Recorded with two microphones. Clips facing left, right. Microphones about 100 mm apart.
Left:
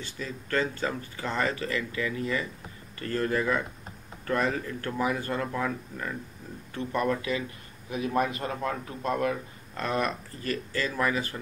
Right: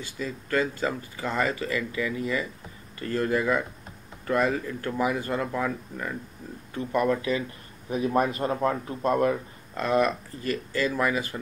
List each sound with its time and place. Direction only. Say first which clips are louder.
0.0 s speech: right 3 dB; 10° right (ahead or behind)
7.2 s a man's voice: right 3 dB; 30° right (ahead or behind)
9.8 s speech: right 5 dB; 5° right (ahead or behind)